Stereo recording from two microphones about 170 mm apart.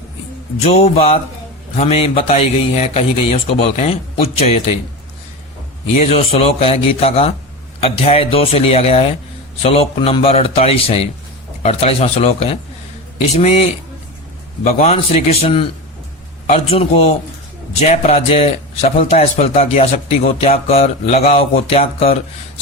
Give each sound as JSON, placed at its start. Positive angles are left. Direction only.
{"t": 0.6, "sound": "speech", "side_deg": 35}
{"t": 6.0, "sound": "speech", "side_deg": 40}